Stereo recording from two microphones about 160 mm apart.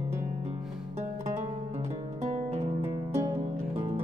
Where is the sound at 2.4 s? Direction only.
40° right (ahead or behind).